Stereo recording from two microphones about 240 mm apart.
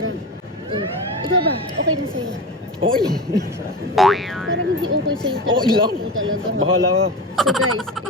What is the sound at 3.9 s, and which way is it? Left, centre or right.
Speech, centre.